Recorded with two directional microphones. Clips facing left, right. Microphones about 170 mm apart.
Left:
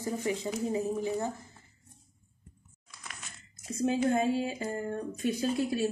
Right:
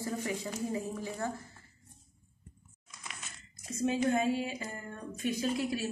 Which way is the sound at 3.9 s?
30° left (ahead or behind).